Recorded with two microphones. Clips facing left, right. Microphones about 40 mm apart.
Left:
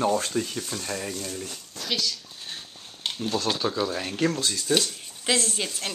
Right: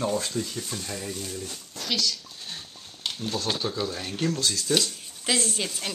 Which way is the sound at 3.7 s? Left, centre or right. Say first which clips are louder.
Left 3 dB; left.